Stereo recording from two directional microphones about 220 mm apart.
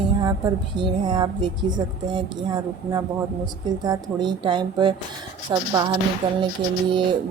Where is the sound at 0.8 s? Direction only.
20° right (ahead or behind).